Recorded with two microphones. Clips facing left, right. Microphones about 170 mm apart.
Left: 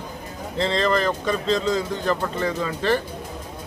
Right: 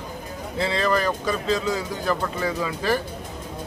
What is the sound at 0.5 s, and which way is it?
Speech, 5° right (ahead or behind).